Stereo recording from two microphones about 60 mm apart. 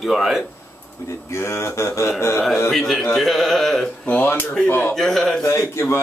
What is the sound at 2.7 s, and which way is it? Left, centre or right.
Speech, centre.